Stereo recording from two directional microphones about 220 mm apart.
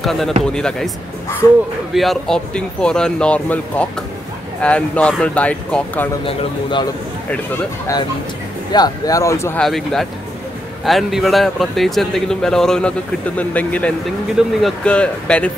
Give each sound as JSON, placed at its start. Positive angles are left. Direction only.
{"t": 0.0, "sound": "a man's voice", "side_deg": 0}
{"t": 2.0, "sound": "a man's voice", "side_deg": 0}
{"t": 6.2, "sound": "speech", "side_deg": 20}
{"t": 8.7, "sound": "a man's voice", "side_deg": 15}